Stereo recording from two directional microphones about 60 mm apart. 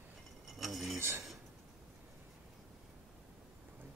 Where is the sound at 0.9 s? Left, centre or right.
Right.